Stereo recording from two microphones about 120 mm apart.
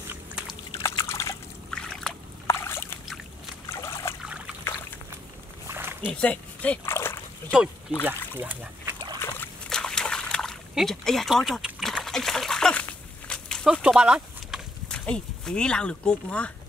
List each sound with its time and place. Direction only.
0.1 s a sound: 10° right (ahead or behind)
0.8 s liquid: 25° left (ahead or behind)
1.7 s boat: 5° left (ahead or behind)
2.4 s rowboat: 20° left (ahead or behind)
3.6 s trickle: 25° left (ahead or behind)
5.7 s a sound: 20° right (ahead or behind)
6.1 s dog: 10° left (ahead or behind)
8.0 s speech: 15° right (ahead or behind)
9.2 s a sound: 20° left (ahead or behind)
9.7 s trickle: 5° left (ahead or behind)
13.3 s a sound: 10° left (ahead or behind)
13.7 s speech: 5° right (ahead or behind)
14.9 s speech: 5° left (ahead or behind)